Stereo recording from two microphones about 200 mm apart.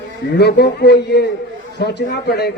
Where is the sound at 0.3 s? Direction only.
55° left (ahead or behind).